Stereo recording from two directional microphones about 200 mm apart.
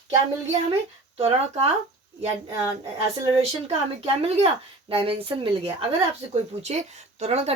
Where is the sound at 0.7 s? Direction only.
30° right (ahead or behind).